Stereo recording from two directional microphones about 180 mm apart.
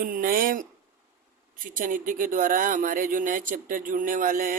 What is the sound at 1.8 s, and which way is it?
Speech, 50° right (ahead or behind).